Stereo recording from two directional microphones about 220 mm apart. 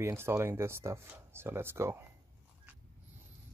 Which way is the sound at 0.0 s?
10° right (ahead or behind).